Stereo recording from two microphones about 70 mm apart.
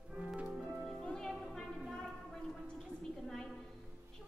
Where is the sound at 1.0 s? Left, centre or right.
Centre.